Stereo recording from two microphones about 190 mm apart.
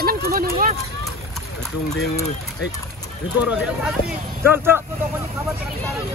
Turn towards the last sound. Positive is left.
turn(degrees=-10)  # may be behind; listen again after turning